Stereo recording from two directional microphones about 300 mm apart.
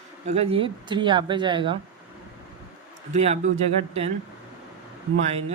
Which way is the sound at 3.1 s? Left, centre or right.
Right.